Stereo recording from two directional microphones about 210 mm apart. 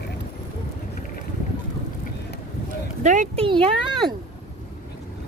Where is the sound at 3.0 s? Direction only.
35° right (ahead or behind).